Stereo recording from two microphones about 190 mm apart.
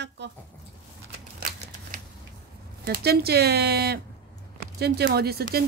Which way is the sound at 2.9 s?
55° right (ahead or behind).